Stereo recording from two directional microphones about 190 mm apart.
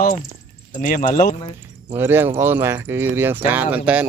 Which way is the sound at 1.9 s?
10° right (ahead or behind).